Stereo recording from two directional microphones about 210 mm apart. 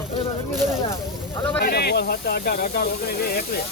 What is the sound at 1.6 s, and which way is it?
Speech, 50° left (ahead or behind).